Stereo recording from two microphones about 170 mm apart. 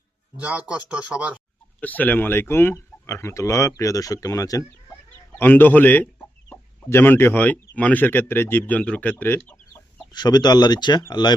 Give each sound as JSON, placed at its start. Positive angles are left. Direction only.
{"t": 0.3, "sound": "speech", "side_deg": -10}
{"t": 1.8, "sound": "speech", "side_deg": 10}
{"t": 10.1, "sound": "speech", "side_deg": 25}